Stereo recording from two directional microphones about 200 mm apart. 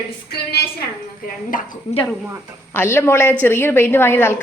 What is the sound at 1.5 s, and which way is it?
Speech, 40° left (ahead or behind).